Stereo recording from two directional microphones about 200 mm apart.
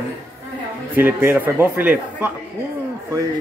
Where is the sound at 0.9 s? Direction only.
10° right (ahead or behind).